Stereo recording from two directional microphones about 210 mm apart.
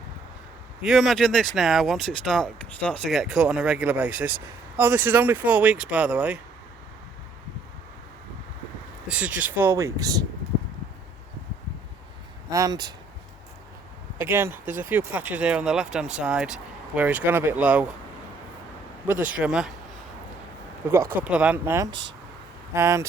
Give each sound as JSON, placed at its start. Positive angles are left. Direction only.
{"t": 0.8, "sound": "speech", "side_deg": 0}
{"t": 9.0, "sound": "speech", "side_deg": -5}
{"t": 12.5, "sound": "speech", "side_deg": -15}
{"t": 14.2, "sound": "speech", "side_deg": -10}
{"t": 19.2, "sound": "speech", "side_deg": -5}
{"t": 20.8, "sound": "speech", "side_deg": -10}